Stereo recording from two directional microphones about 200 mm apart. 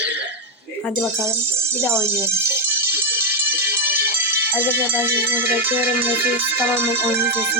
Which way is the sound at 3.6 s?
50° right (ahead or behind).